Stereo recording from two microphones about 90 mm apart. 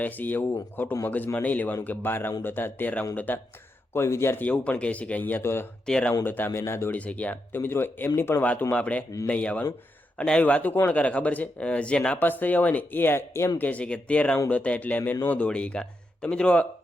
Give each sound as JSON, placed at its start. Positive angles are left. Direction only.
{"t": 0.0, "sound": "speech", "side_deg": 20}
{"t": 3.9, "sound": "speech", "side_deg": 30}
{"t": 4.4, "sound": "speech", "side_deg": 15}
{"t": 5.8, "sound": "speech", "side_deg": 10}
{"t": 6.2, "sound": "speech", "side_deg": 20}
{"t": 6.9, "sound": "speech", "side_deg": 15}
{"t": 13.6, "sound": "speech", "side_deg": 15}